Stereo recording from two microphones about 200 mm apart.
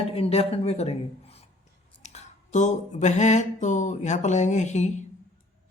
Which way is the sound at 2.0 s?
35° left (ahead or behind).